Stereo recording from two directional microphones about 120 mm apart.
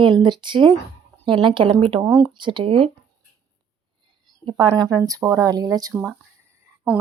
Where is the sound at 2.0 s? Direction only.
25° right (ahead or behind).